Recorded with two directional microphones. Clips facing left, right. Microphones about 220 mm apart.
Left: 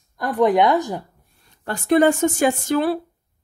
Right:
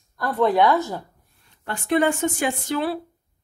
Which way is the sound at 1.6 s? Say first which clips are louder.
Left 5 dB; 40° left (ahead or behind).